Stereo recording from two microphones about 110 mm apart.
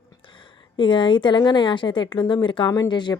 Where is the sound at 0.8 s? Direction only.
50° left (ahead or behind).